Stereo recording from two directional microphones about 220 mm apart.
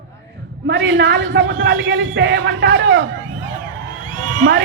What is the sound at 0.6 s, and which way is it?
A man's voice, 50° right (ahead or behind).